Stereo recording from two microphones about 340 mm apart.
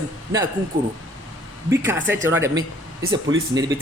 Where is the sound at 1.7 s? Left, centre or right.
Centre.